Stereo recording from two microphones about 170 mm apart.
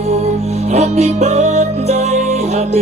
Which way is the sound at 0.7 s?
45° right (ahead or behind).